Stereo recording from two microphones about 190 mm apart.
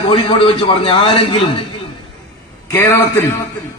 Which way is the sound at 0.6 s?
25° left (ahead or behind).